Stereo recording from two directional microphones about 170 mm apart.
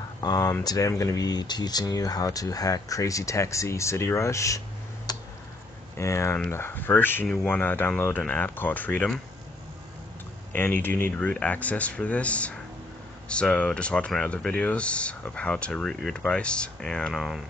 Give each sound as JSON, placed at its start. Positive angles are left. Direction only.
{"t": 0.2, "sound": "speech", "side_deg": 20}
{"t": 10.5, "sound": "speech", "side_deg": 10}